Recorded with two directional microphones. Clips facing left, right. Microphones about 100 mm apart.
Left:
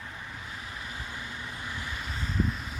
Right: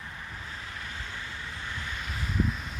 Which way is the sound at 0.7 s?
20° left (ahead or behind).